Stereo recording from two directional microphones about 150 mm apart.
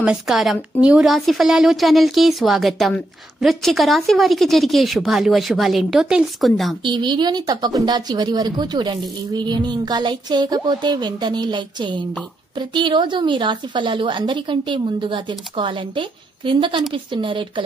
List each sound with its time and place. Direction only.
0.0 s a woman's voice: 5° right (ahead or behind)
6.8 s a woman's voice: 30° right (ahead or behind)